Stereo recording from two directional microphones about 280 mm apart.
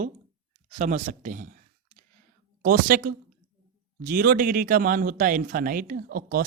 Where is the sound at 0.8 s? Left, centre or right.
Right.